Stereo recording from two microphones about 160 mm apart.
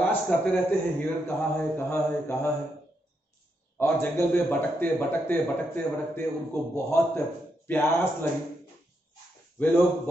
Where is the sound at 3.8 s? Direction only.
15° left (ahead or behind).